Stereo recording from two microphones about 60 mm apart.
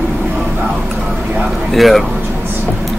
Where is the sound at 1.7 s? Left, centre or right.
Centre.